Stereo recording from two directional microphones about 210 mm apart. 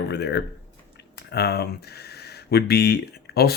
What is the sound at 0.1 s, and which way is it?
Speech, 55° left (ahead or behind).